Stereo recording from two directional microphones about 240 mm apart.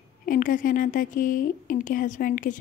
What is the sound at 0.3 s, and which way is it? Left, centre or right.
A woman's voice, left.